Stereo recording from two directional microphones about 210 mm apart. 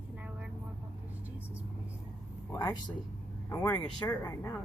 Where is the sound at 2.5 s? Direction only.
15° left (ahead or behind).